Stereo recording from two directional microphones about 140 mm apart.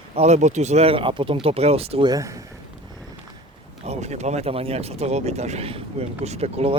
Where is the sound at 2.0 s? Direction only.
25° right (ahead or behind).